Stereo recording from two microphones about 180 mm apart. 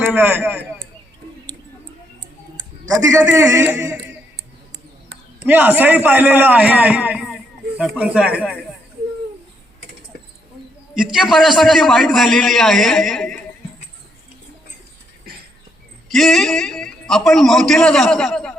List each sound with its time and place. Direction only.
0.0 s a man's voice: 10° right (ahead or behind)
2.8 s a man's voice: 20° right (ahead or behind)
5.5 s a man's voice: 10° right (ahead or behind)
10.9 s a man's voice: 5° right (ahead or behind)
16.0 s a man's voice: centre (ahead or behind)